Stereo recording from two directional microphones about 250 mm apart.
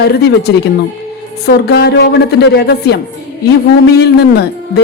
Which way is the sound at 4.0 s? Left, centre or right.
Left.